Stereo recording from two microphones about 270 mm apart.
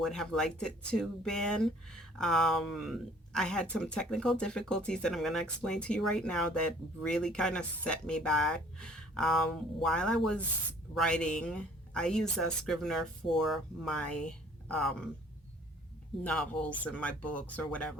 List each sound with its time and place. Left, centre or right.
0.0 s speech: centre
16.2 s speech: centre